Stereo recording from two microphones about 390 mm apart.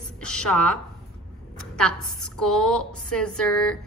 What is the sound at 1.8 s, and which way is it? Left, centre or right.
A woman's voice, centre.